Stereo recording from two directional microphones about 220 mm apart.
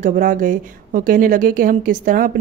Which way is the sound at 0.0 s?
35° right (ahead or behind).